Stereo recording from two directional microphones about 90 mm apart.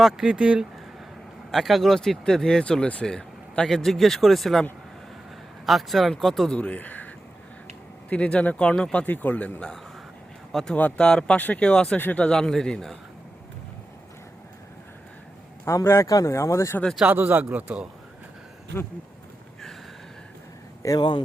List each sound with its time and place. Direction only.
0.0 s a man's voice: 10° right (ahead or behind)
1.5 s speech: centre (ahead or behind)
5.6 s speech: centre (ahead or behind)
6.6 s speech: 15° left (ahead or behind)
8.1 s a man's voice: 15° left (ahead or behind)
15.6 s speech: 30° left (ahead or behind)
17.0 s a man's voice: 15° right (ahead or behind)
20.8 s speech: 35° left (ahead or behind)